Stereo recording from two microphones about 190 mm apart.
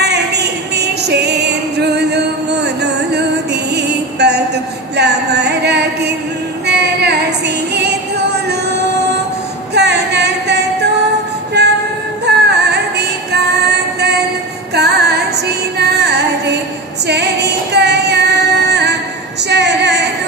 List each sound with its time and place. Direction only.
0.7 s music: 60° right (ahead or behind)
4.9 s a sound: 60° right (ahead or behind)
6.7 s child singing: 60° right (ahead or behind)
7.7 s music: 60° right (ahead or behind)
17.1 s female singing: 60° right (ahead or behind)
18.7 s music: 60° right (ahead or behind)
19.5 s a sound: 65° right (ahead or behind)